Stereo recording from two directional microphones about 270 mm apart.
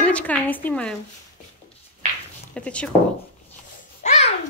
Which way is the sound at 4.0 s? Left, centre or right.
Left.